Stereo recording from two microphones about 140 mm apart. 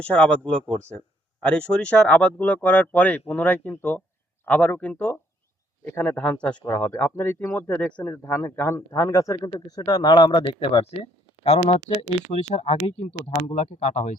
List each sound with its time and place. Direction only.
0.0 s a man's voice: 10° left (ahead or behind); by 10.9 s 40° left (ahead or behind)
11.4 s speech: 50° left (ahead or behind)